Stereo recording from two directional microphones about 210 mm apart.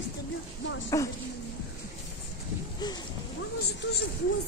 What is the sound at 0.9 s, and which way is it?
Speech, 15° left (ahead or behind).